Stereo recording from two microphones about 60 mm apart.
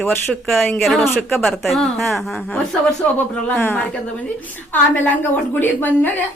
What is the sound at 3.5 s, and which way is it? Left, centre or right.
Speech, left.